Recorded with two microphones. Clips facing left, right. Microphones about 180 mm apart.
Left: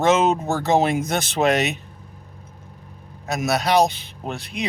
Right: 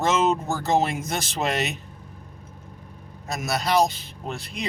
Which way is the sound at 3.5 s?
65° left (ahead or behind).